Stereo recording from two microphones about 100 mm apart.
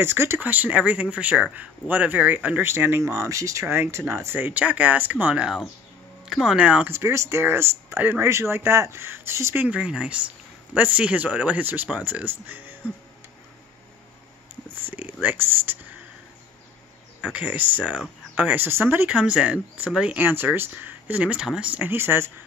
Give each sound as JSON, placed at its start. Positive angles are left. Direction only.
{"t": 0.0, "sound": "speech", "side_deg": -25}
{"t": 6.9, "sound": "speech", "side_deg": -25}
{"t": 9.6, "sound": "speech", "side_deg": -10}
{"t": 14.8, "sound": "speech", "side_deg": -20}
{"t": 17.2, "sound": "speech", "side_deg": -15}
{"t": 19.0, "sound": "speech", "side_deg": -10}
{"t": 20.2, "sound": "speech", "side_deg": -20}